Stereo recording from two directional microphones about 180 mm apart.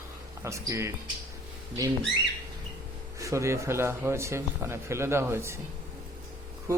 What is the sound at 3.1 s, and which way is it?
Speech, 15° right (ahead or behind).